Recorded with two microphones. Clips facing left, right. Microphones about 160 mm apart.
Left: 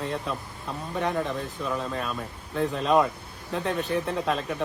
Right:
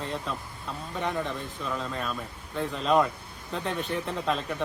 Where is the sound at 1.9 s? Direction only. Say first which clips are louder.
Left 2 dB; 5° left (ahead or behind).